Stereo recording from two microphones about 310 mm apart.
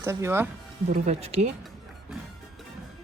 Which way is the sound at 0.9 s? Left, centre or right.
Right.